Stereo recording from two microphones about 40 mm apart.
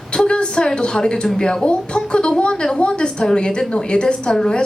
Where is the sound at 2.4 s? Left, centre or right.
Left.